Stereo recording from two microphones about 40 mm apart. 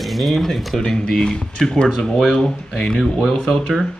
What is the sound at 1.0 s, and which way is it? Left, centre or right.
Speech, centre.